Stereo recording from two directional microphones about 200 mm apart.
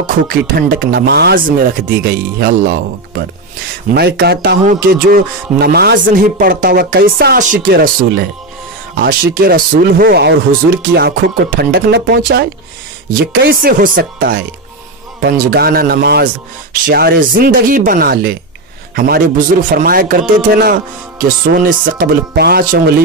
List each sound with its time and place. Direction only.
0.3 s a man's voice: 50° right (ahead or behind)
3.9 s a man's voice: 55° right (ahead or behind)